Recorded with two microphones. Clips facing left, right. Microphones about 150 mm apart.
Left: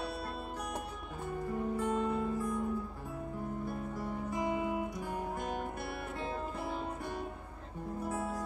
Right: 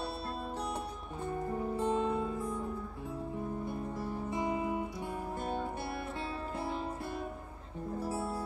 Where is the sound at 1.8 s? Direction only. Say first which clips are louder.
Right 2 dB; 25° right (ahead or behind).